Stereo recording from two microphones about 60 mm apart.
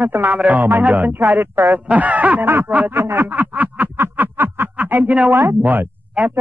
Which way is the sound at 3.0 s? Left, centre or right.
Right.